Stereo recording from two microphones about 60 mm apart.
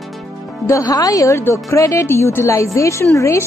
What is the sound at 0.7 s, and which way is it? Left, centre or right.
Speech, left.